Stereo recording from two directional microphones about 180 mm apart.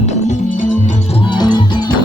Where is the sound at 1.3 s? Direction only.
25° left (ahead or behind).